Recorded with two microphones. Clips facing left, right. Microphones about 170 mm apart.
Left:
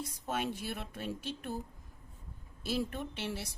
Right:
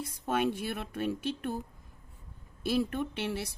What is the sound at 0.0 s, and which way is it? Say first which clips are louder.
A woman's voice: right 6 dB; 55° right (ahead or behind).